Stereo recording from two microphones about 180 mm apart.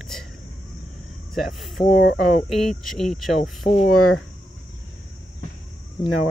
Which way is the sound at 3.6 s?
40° left (ahead or behind).